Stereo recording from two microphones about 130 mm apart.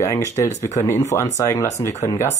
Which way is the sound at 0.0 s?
20° left (ahead or behind).